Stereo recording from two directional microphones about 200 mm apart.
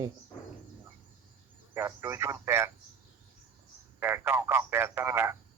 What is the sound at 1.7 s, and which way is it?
Speech, 10° right (ahead or behind).